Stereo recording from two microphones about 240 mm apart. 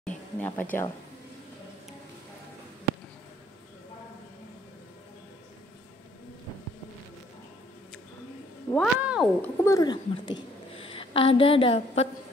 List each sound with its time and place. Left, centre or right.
0.0 s a sound: centre
8.7 s speech: centre
9.4 s a woman's voice: centre